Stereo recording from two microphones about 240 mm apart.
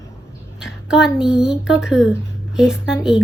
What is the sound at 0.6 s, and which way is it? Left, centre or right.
A woman's voice, centre.